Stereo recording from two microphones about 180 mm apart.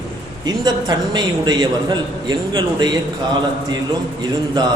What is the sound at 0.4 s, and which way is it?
A man's voice, 20° right (ahead or behind).